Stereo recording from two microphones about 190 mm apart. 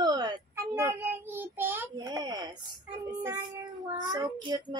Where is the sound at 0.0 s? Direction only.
20° right (ahead or behind).